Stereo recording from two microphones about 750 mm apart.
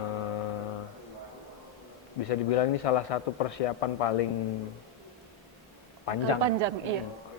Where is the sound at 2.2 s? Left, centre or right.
Left.